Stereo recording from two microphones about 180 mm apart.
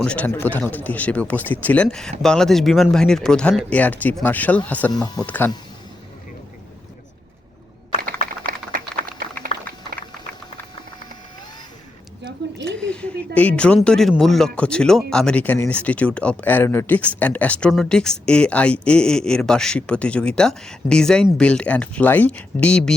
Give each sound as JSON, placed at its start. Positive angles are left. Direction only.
{"t": 0.0, "sound": "speech", "side_deg": 5}
{"t": 8.0, "sound": "a sound", "side_deg": -50}
{"t": 12.8, "sound": "speech", "side_deg": 5}